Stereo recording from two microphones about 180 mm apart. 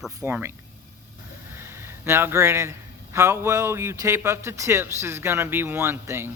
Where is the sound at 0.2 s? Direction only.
10° right (ahead or behind).